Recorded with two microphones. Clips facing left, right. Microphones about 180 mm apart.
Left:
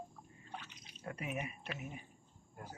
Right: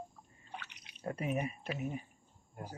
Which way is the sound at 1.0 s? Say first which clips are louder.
Right 6 dB; 35° right (ahead or behind).